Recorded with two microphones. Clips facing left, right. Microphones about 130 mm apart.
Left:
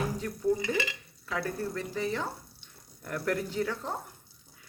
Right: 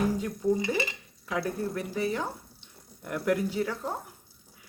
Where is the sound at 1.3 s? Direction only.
15° right (ahead or behind).